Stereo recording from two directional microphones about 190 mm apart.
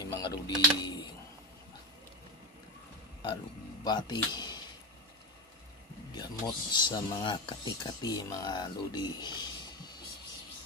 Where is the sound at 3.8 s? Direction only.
20° left (ahead or behind).